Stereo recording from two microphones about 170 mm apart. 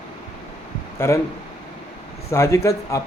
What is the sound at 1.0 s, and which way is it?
Speech, 15° left (ahead or behind).